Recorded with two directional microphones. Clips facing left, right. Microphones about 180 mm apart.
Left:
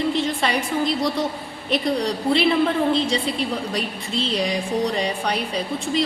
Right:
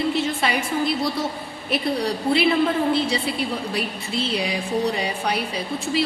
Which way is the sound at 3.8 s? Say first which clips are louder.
Even; 5° right (ahead or behind).